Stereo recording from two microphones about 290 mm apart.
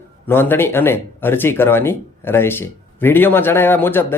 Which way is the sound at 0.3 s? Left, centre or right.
Centre.